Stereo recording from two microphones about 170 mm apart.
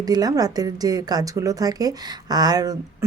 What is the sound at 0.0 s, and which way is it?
Speech, 20° right (ahead or behind).